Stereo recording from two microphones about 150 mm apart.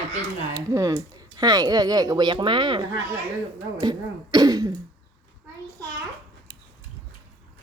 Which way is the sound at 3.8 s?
25° right (ahead or behind).